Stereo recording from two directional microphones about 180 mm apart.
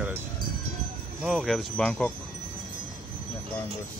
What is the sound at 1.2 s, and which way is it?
Speech, centre (ahead or behind).